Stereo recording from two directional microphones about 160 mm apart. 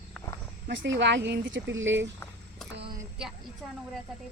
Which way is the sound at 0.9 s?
90° right.